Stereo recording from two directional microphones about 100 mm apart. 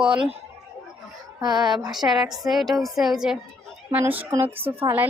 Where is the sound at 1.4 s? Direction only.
45° right (ahead or behind).